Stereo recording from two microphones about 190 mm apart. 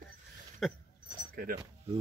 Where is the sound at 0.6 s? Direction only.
Centre (ahead or behind).